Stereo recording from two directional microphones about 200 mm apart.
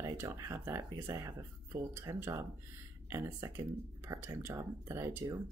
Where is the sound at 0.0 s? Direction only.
15° right (ahead or behind).